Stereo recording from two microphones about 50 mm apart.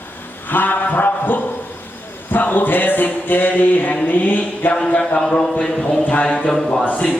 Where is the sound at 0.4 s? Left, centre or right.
Left.